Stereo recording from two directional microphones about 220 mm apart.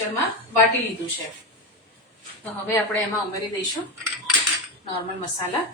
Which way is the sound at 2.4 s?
10° left (ahead or behind).